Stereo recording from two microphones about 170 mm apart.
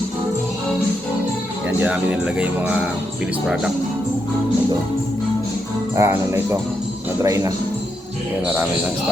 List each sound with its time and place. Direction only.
1.8 s speech: 10° right (ahead or behind)
6.0 s speech: 15° right (ahead or behind)